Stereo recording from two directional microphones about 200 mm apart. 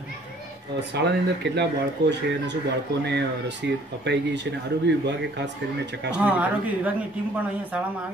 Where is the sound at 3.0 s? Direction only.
60° right (ahead or behind).